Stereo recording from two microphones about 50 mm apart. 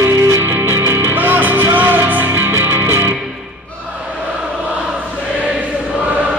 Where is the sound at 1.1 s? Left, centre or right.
Right.